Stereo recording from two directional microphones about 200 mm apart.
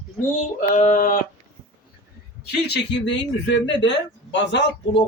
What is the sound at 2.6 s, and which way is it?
Speech, 60° left (ahead or behind).